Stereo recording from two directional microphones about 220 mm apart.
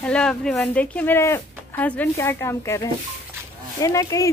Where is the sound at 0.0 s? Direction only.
5° left (ahead or behind).